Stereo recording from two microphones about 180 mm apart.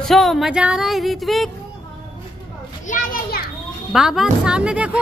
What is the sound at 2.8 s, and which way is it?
Children playing, 50° left (ahead or behind).